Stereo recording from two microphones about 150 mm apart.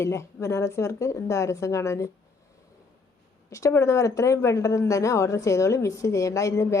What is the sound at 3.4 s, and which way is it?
Speech, 20° left (ahead or behind).